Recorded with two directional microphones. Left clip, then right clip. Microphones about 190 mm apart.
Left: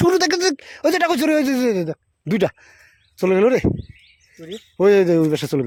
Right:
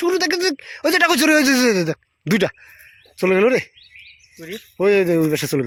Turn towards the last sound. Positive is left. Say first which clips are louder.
# even
turn(degrees=10)  # may be behind; listen again after turning